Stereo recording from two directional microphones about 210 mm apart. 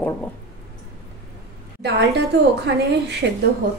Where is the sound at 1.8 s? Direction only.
55° right (ahead or behind).